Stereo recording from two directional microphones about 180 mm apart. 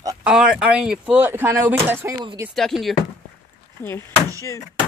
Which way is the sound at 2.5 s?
Centre (ahead or behind).